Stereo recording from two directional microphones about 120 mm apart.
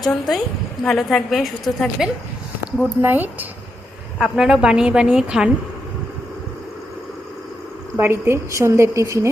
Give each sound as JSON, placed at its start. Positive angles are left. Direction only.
{"t": 0.0, "sound": "a woman's voice", "side_deg": 0}
{"t": 3.0, "sound": "speech", "side_deg": -15}
{"t": 4.2, "sound": "a woman's voice", "side_deg": -5}
{"t": 7.9, "sound": "a woman's voice", "side_deg": -20}